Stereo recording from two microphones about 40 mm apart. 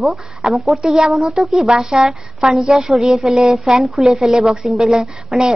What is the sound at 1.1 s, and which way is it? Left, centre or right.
A woman's voice, centre.